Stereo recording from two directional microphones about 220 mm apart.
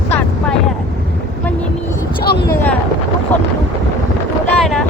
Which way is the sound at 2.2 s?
45° left (ahead or behind).